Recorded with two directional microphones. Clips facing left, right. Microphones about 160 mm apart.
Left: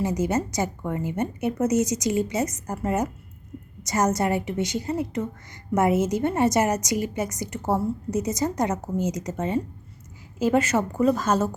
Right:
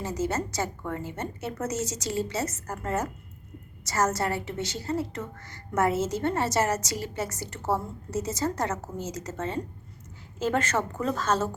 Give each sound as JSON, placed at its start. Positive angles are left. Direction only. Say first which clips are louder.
{"t": 0.0, "sound": "a woman's voice", "louder": "left 5 dB", "side_deg": 15}